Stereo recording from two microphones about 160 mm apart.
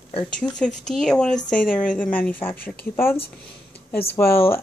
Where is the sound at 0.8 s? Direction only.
5° left (ahead or behind).